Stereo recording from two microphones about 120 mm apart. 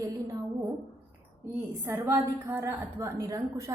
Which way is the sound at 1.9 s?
20° right (ahead or behind).